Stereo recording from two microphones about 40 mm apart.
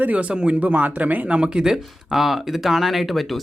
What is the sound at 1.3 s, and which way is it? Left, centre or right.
Speech, right.